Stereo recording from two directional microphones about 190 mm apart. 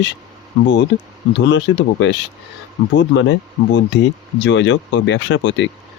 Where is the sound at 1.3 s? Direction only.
70° left (ahead or behind).